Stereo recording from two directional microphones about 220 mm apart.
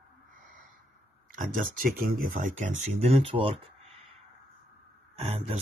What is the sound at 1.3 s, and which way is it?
Speech, 40° right (ahead or behind).